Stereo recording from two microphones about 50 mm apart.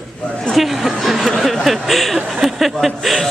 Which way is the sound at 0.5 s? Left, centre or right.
Centre.